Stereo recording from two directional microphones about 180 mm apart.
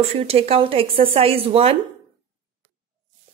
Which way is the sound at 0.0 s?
35° right (ahead or behind).